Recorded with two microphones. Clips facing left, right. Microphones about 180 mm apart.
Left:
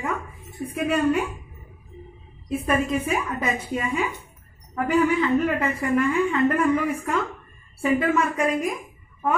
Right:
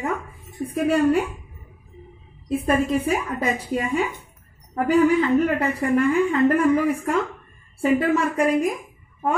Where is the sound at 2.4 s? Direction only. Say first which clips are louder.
Right 3 dB; 35° right (ahead or behind).